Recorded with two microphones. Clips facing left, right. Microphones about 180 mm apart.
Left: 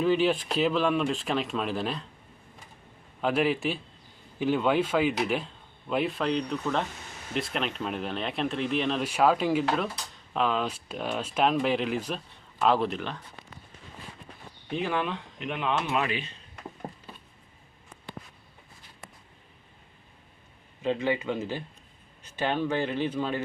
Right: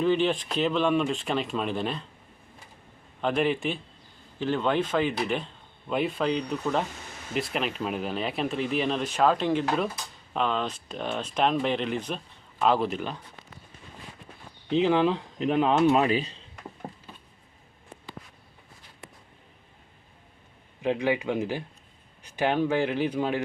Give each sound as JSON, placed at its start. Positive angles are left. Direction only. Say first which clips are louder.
{"t": 0.0, "sound": "speech", "louder": "even", "side_deg": 5}
{"t": 3.2, "sound": "speech", "louder": "even", "side_deg": 5}
{"t": 14.7, "sound": "speech", "louder": "right 7 dB", "side_deg": -25}
{"t": 20.8, "sound": "speech", "louder": "right 2 dB", "side_deg": -15}